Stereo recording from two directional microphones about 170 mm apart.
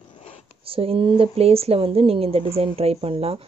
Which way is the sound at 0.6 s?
35° right (ahead or behind).